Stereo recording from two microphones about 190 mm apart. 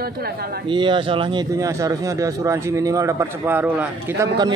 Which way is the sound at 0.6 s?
25° right (ahead or behind).